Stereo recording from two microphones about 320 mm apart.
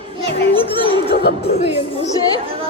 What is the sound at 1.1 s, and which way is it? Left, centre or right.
Speech, left.